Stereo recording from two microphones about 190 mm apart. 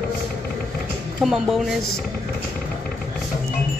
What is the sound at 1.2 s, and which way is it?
Speech, centre (ahead or behind).